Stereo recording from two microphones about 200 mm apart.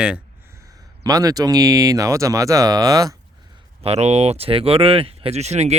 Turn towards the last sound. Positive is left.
turn(degrees=-35)  # may be behind; listen again after turning